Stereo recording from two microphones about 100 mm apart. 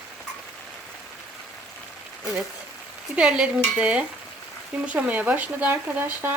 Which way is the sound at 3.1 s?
10° right (ahead or behind).